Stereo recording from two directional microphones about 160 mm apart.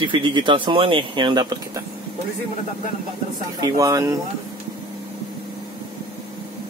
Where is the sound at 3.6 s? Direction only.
20° right (ahead or behind).